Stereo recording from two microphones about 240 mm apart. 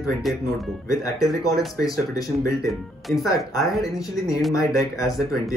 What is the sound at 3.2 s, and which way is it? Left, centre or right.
Speech, centre.